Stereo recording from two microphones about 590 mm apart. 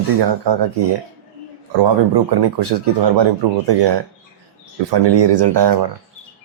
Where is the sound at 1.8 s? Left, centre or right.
Right.